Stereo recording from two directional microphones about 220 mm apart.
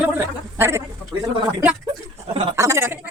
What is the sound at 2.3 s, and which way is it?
Speech, 15° right (ahead or behind).